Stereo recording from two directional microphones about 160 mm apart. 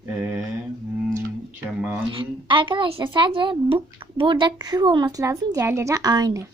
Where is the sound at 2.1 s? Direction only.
30° right (ahead or behind).